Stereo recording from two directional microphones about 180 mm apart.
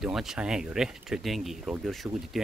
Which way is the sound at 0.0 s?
Centre (ahead or behind).